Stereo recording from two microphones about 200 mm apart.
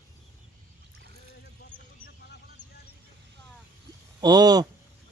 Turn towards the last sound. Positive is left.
turn(degrees=-20)  # may be behind; listen again after turning